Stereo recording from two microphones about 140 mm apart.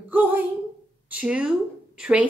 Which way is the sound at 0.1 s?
15° right (ahead or behind).